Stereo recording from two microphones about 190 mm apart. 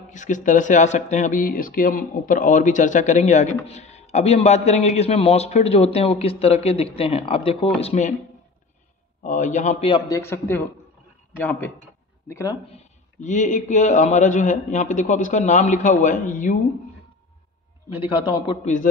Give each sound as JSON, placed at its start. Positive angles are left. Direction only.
{"t": 0.1, "sound": "speech", "side_deg": 40}
{"t": 9.2, "sound": "speech", "side_deg": 40}
{"t": 9.8, "sound": "speech", "side_deg": 20}
{"t": 12.7, "sound": "speech", "side_deg": 40}
{"t": 18.6, "sound": "speech", "side_deg": 40}